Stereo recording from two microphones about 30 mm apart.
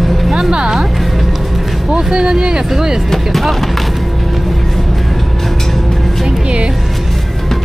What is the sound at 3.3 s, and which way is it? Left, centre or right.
Speech, centre.